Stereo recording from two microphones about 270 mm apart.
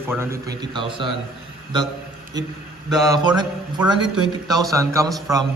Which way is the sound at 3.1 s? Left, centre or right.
Centre.